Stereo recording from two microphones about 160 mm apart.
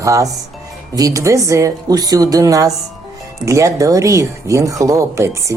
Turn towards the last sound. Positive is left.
turn(degrees=-20)  # may be behind; listen again after turning